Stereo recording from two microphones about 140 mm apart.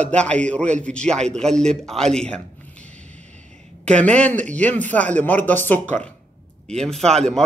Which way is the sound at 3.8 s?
10° left (ahead or behind).